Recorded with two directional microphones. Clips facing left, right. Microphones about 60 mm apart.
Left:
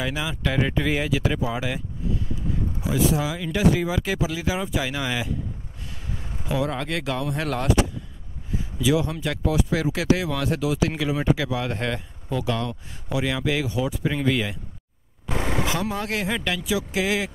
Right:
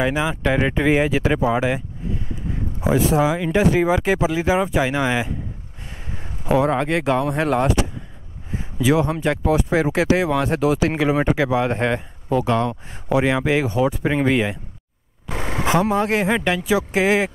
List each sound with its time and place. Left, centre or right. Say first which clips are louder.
0.0 s speech: right 7 dB; right
16.6 s speech: right 6 dB; right